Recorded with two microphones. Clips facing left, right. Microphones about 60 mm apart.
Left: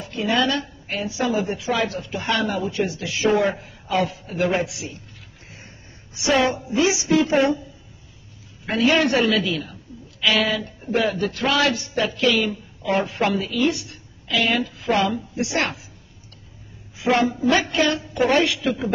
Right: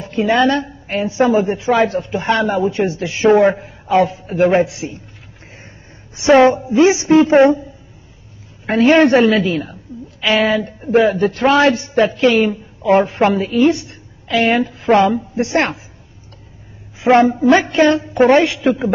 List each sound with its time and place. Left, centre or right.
0.0 s a man's voice: right
6.1 s a man's voice: right
8.6 s a man's voice: right
17.0 s a man's voice: right